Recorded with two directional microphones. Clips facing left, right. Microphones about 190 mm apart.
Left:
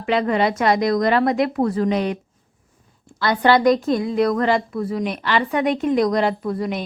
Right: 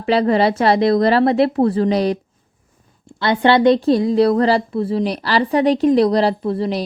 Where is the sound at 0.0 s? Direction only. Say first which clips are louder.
Right 4 dB; 35° right (ahead or behind).